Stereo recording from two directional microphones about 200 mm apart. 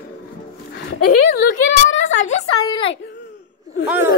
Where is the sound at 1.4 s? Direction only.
70° left (ahead or behind).